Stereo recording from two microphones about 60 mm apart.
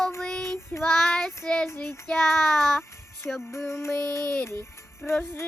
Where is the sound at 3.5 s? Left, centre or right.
Left.